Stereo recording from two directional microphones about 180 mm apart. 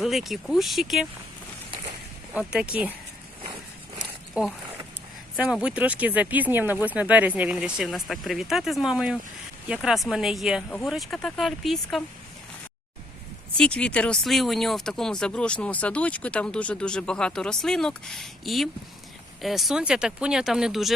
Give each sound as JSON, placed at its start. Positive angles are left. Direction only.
{"t": 0.0, "sound": "speech", "side_deg": 0}
{"t": 2.3, "sound": "speech", "side_deg": -5}
{"t": 4.4, "sound": "speech", "side_deg": -5}
{"t": 13.6, "sound": "speech", "side_deg": 5}